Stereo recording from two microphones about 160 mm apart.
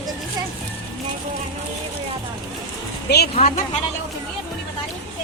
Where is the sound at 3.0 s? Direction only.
90° left.